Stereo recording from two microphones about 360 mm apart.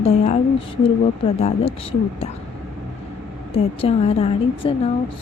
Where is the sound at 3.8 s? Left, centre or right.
Centre.